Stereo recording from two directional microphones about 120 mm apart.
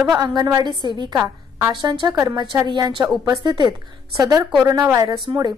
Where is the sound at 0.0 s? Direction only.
35° right (ahead or behind).